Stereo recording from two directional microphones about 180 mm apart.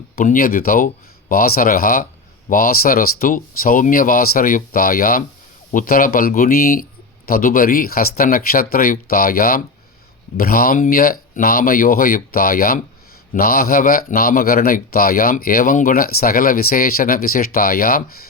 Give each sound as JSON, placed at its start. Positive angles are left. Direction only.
{"t": 0.2, "sound": "speech", "side_deg": 55}